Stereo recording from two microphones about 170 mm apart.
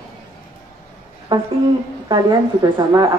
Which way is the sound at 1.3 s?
30° right (ahead or behind).